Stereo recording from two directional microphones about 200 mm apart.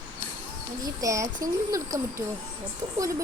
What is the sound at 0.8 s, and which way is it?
Speech, 15° right (ahead or behind).